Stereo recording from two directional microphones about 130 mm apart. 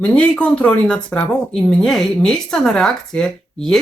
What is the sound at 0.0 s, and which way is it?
Speech, 10° left (ahead or behind).